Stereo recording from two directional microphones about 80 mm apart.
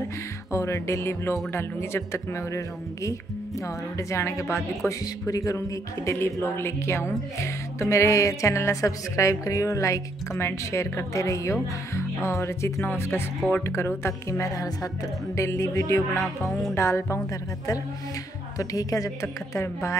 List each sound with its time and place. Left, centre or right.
0.5 s speech: left
6.0 s speech: left
14.5 s a woman's voice: left
16.2 s music: centre
16.7 s speech: left
18.6 s a woman's voice: left